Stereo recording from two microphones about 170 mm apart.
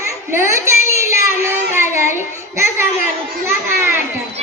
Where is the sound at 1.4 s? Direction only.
15° right (ahead or behind).